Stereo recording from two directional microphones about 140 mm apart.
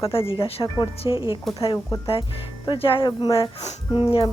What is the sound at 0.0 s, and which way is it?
A woman's voice, 40° left (ahead or behind).